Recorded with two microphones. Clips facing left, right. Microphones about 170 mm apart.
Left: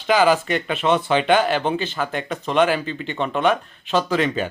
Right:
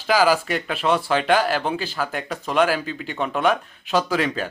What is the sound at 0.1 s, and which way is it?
Speech, 5° right (ahead or behind).